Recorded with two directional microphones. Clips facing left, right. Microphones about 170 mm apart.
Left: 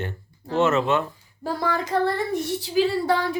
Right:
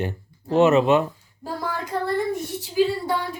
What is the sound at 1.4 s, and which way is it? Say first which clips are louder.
Child singing: left 4 dB; 85° left.